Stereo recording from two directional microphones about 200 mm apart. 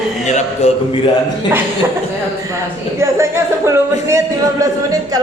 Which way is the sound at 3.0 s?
15° right (ahead or behind).